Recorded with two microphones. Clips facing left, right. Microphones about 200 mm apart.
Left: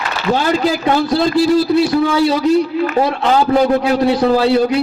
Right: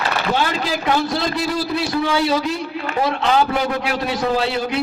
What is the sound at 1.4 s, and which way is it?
Speech, 25° left (ahead or behind).